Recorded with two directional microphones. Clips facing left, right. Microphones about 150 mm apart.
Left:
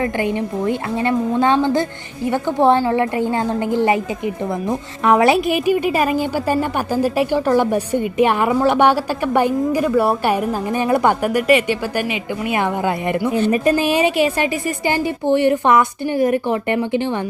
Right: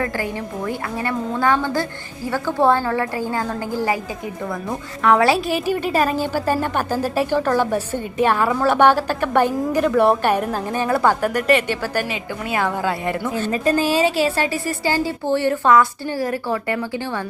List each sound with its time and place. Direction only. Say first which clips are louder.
0.0 s a woman's voice: left 5 dB; 20° left (ahead or behind)
5.0 s a woman's voice: left 2 dB; 20° left (ahead or behind)